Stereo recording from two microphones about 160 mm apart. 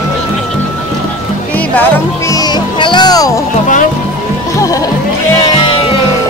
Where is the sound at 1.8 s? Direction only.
20° left (ahead or behind).